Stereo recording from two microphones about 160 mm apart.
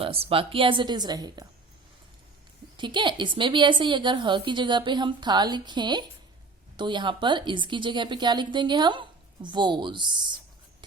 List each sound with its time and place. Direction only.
0.0 s speech: 35° right (ahead or behind)
2.7 s a woman's voice: 30° right (ahead or behind)